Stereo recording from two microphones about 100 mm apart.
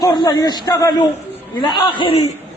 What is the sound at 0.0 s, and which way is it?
A man's voice, 40° left (ahead or behind).